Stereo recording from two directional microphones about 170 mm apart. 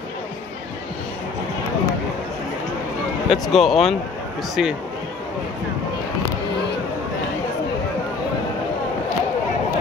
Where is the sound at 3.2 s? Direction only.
Centre (ahead or behind).